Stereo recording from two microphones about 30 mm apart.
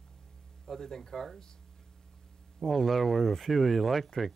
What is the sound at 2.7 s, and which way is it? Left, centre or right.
Speech, centre.